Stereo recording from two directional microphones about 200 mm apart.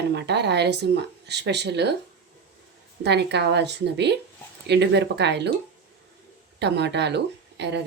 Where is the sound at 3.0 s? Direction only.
55° right (ahead or behind).